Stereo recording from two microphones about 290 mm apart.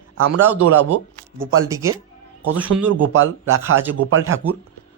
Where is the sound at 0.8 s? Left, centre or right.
Centre.